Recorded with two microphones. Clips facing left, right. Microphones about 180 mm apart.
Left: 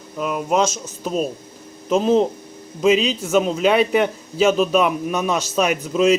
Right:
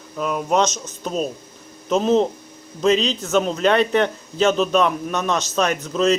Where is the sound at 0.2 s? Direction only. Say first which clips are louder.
Even; 5° left (ahead or behind).